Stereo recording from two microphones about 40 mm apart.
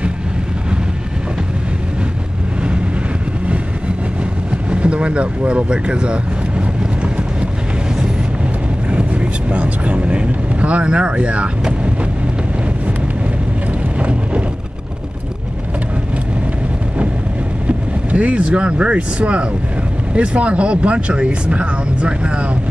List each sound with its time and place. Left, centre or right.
4.6 s speech: right
8.9 s vehicle: right
17.6 s speech: right